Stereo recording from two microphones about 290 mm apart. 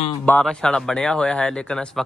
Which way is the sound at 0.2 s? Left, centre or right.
Centre.